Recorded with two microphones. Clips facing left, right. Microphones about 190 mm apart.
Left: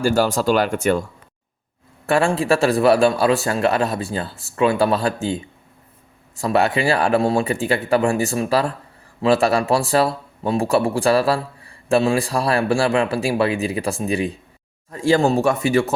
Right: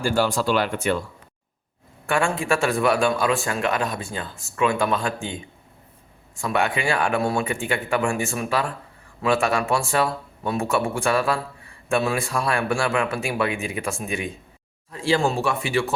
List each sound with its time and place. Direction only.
0.0 s speech: 40° left (ahead or behind)
2.0 s a man's voice: 35° left (ahead or behind)